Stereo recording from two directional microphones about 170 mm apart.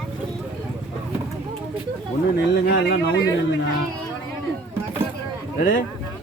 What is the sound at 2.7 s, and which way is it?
Speech, 80° left.